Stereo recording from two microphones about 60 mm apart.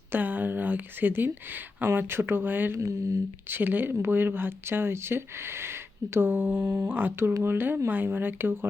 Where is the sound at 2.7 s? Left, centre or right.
Right.